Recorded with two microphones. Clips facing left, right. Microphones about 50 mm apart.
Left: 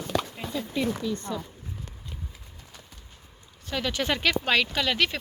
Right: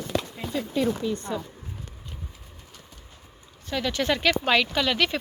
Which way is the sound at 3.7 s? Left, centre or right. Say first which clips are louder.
Right 2 dB; centre.